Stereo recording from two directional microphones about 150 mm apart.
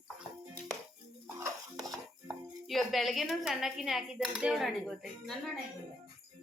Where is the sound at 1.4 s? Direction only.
20° right (ahead or behind).